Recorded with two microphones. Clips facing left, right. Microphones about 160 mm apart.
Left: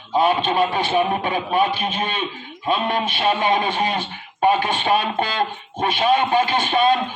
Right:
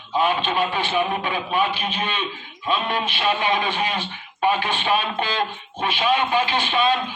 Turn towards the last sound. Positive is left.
turn(degrees=45)  # may be behind; listen again after turning